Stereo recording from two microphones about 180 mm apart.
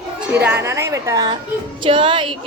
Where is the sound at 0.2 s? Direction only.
10° right (ahead or behind).